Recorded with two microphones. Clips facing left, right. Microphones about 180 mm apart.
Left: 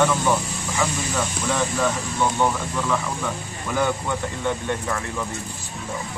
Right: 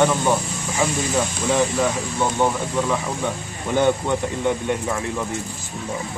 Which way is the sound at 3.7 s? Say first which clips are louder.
Right 5 dB; 25° right (ahead or behind).